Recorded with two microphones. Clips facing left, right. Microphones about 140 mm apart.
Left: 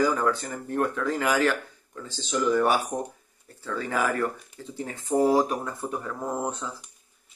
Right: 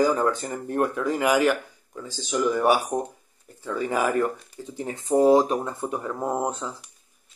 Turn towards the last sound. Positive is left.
turn(degrees=-20)  # may be behind; listen again after turning